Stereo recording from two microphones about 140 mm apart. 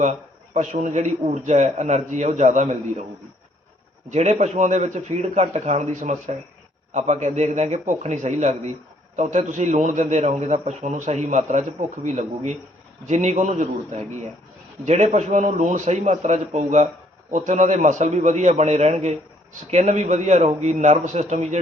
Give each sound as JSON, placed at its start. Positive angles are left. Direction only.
{"t": 0.0, "sound": "a man's voice", "side_deg": -55}
{"t": 4.1, "sound": "a man's voice", "side_deg": -55}